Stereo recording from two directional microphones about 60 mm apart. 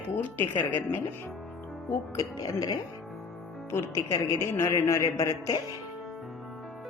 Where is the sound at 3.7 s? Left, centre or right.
Left.